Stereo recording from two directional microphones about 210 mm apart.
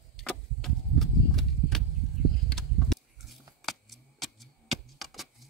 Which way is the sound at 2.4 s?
Centre (ahead or behind).